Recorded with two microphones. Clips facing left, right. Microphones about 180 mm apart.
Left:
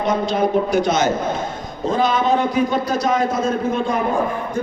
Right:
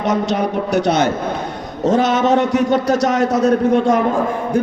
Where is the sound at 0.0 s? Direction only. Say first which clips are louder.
Right 1 dB; 75° right (ahead or behind).